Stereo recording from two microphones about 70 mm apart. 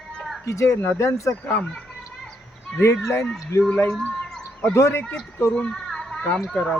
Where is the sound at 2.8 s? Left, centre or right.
Left.